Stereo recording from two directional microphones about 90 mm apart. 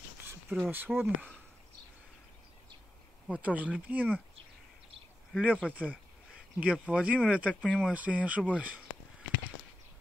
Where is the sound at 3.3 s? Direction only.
15° right (ahead or behind).